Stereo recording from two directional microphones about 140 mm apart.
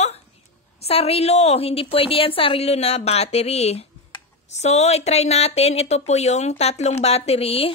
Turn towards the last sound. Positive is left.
turn(degrees=45)  # may be behind; listen again after turning